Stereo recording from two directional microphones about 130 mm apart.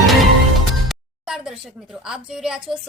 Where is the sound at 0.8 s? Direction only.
5° right (ahead or behind).